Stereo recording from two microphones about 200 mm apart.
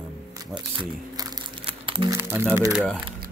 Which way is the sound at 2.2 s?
15° right (ahead or behind).